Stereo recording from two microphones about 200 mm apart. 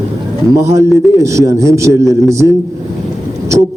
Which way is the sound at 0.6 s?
15° right (ahead or behind).